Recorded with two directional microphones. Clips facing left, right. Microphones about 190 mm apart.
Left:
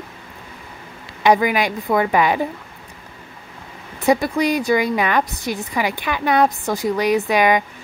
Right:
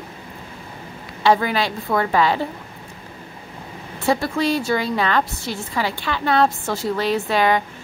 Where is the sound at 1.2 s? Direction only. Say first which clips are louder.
Left 2 dB; 15° left (ahead or behind).